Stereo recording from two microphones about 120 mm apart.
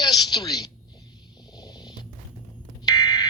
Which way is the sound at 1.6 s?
35° left (ahead or behind).